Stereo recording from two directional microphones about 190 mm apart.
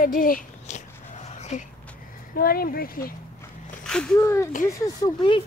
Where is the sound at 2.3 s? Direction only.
50° left (ahead or behind).